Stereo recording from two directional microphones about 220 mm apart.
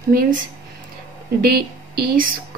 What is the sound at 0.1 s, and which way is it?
Speech, 40° right (ahead or behind).